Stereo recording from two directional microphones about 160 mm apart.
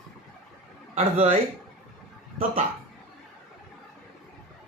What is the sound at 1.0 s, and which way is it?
Speech, 45° right (ahead or behind).